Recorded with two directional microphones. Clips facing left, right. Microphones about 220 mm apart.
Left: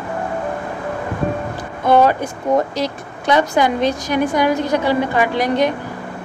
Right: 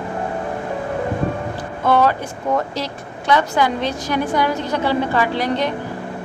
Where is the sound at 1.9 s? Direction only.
15° left (ahead or behind).